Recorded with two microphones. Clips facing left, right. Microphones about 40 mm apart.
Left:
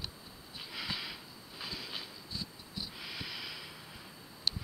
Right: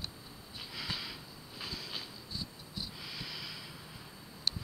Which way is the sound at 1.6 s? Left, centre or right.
Centre.